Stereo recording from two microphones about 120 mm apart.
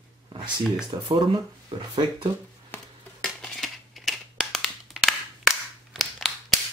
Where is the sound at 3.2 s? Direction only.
Centre (ahead or behind).